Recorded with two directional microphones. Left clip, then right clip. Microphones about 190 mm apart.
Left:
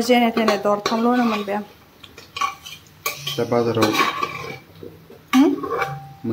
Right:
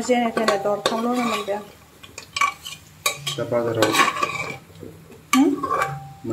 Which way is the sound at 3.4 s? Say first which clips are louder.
Left 4 dB; 30° left (ahead or behind).